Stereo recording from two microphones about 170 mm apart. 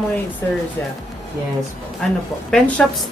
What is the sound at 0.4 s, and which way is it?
Speech, 15° left (ahead or behind).